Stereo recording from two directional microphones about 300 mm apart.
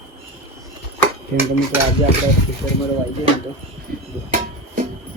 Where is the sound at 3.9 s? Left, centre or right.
Right.